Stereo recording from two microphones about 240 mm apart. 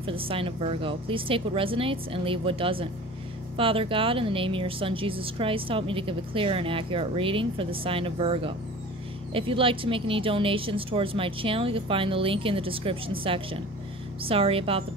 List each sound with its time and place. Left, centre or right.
0.0 s a woman's voice: right